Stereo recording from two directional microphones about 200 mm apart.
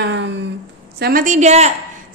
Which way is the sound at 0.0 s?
65° right (ahead or behind).